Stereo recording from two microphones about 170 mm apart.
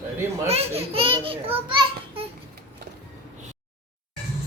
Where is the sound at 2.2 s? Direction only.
35° right (ahead or behind).